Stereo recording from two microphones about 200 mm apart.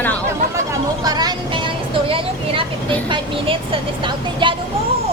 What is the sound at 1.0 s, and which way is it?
Vehicle, 20° right (ahead or behind).